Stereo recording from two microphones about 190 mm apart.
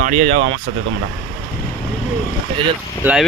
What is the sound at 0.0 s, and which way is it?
Speech, 40° right (ahead or behind).